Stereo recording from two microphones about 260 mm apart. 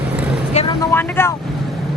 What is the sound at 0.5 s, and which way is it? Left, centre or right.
Vehicle, centre.